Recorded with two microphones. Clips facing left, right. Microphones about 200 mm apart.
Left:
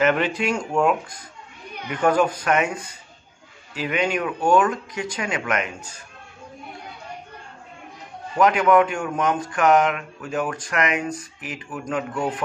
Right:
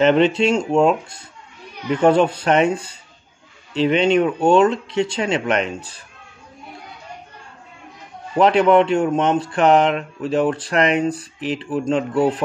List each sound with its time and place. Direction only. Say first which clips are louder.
0.0 s speech: right 6 dB; 25° right (ahead or behind)
8.4 s speech: right 3 dB; 30° right (ahead or behind)